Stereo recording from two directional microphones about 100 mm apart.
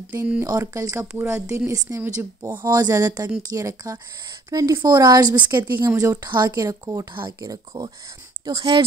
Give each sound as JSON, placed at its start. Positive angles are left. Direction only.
{"t": 0.1, "sound": "speech", "side_deg": -20}
{"t": 0.5, "sound": "speech", "side_deg": -35}
{"t": 5.9, "sound": "speech", "side_deg": -35}